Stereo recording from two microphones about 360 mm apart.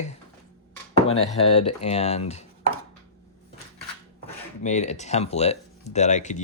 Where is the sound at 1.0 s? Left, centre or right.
Centre.